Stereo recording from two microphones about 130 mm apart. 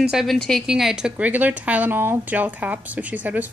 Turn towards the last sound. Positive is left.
turn(degrees=-15)  # may be behind; listen again after turning